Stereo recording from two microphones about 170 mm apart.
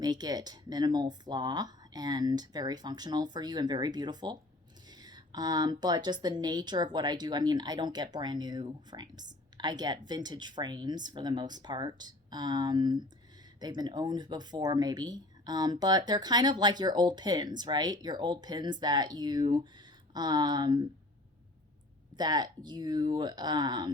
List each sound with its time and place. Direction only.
0.0 s speech: 25° right (ahead or behind)
22.2 s speech: 25° right (ahead or behind)